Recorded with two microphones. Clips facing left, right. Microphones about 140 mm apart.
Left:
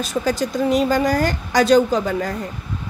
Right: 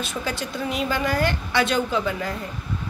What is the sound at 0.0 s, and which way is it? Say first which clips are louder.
A woman's voice: left 8 dB; 40° left (ahead or behind).